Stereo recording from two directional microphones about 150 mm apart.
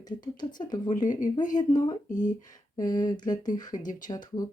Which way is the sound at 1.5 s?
25° left (ahead or behind).